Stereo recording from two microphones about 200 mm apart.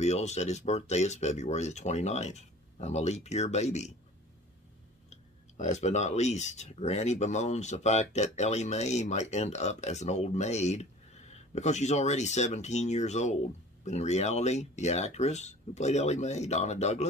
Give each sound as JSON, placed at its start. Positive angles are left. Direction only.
{"t": 0.0, "sound": "speech", "side_deg": 35}
{"t": 5.1, "sound": "speech", "side_deg": 35}